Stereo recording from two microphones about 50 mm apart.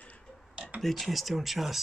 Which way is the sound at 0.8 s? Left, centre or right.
Centre.